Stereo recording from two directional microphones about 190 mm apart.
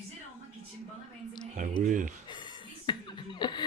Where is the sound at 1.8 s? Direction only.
45° right (ahead or behind).